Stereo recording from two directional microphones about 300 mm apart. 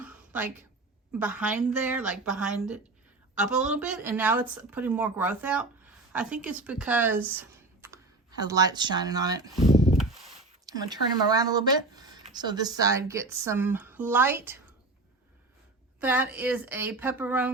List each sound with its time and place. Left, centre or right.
0.0 s a sound: centre
1.2 s a woman's voice: centre
9.7 s rub: left
10.0 s a sound: centre
10.7 s speech: centre
16.0 s a woman's voice: centre